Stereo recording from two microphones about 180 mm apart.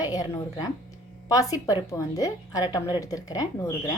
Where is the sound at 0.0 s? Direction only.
20° left (ahead or behind).